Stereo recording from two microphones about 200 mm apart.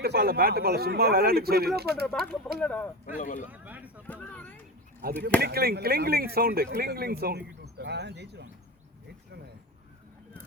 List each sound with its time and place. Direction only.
0.0 s speech: 55° right (ahead or behind)
2.0 s speech: 5° left (ahead or behind)
3.2 s speech: 40° left (ahead or behind)
3.5 s speech: 10° right (ahead or behind)
4.0 s a sound: 5° left (ahead or behind)
5.4 s speech: 50° right (ahead or behind)